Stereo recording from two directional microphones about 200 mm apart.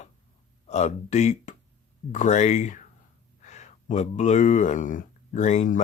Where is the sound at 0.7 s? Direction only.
35° left (ahead or behind).